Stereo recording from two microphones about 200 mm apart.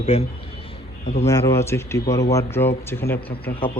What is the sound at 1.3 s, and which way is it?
Speech, 15° left (ahead or behind).